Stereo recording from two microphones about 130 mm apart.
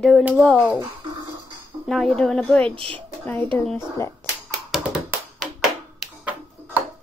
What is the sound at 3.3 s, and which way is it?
Speech, 15° left (ahead or behind).